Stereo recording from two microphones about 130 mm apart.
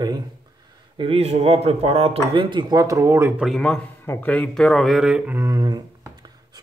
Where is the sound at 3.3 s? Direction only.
Centre (ahead or behind).